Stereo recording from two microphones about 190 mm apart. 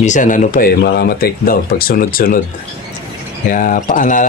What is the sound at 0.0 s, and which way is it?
Speech, 40° left (ahead or behind).